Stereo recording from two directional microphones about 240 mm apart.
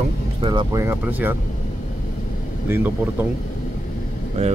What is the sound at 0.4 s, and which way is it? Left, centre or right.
Speech, centre.